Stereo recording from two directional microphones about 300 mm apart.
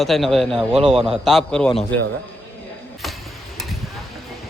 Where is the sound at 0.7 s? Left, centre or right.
Centre.